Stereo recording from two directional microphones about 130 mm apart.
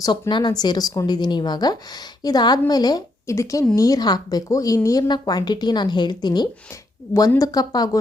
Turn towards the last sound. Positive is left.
turn(degrees=30)  # may be behind; listen again after turning